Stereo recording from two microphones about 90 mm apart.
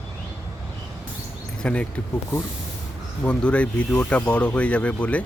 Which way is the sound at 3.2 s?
15° left (ahead or behind).